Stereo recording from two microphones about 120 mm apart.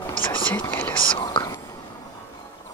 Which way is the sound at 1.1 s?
40° left (ahead or behind).